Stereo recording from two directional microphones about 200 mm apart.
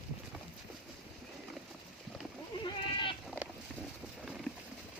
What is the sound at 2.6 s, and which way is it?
Goat, 25° left (ahead or behind).